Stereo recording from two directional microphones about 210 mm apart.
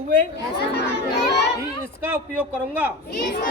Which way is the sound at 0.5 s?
50° left (ahead or behind).